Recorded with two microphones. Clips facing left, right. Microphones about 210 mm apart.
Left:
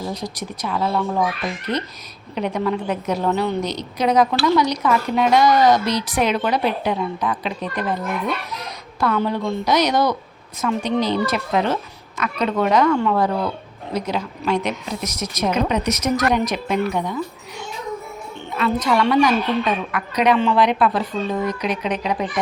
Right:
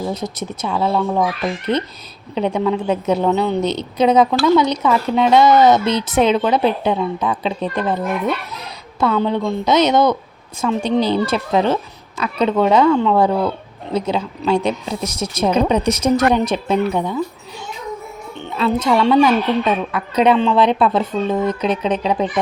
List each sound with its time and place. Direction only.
0.1 s speech: 25° right (ahead or behind)
2.3 s speech: 25° right (ahead or behind)
18.3 s speech: 25° right (ahead or behind)